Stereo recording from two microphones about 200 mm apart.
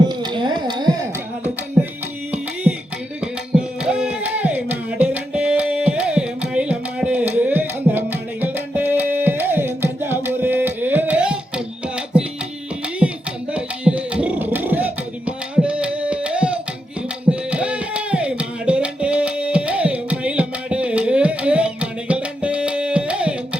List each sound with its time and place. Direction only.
0.1 s a sound: 20° right (ahead or behind)
3.2 s music: 5° right (ahead or behind)
13.5 s music: 5° right (ahead or behind)
15.6 s tabla: 5° right (ahead or behind)
17.5 s music: 5° right (ahead or behind)